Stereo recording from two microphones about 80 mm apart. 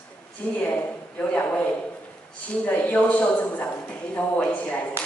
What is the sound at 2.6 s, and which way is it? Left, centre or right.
Speech, left.